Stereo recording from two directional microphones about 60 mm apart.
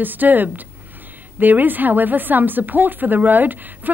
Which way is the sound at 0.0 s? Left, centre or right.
Right.